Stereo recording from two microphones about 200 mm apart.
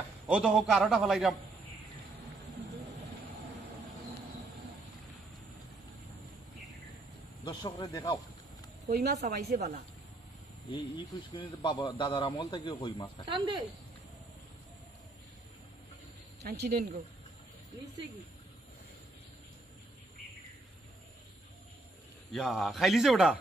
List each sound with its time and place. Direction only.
0.3 s a man's voice: 5° right (ahead or behind)
7.4 s a man's voice: 20° left (ahead or behind)
8.9 s speech: 50° right (ahead or behind)
10.7 s a man's voice: 25° left (ahead or behind)
13.2 s speech: 25° right (ahead or behind)
16.4 s speech: 50° right (ahead or behind)
22.3 s a man's voice: centre (ahead or behind)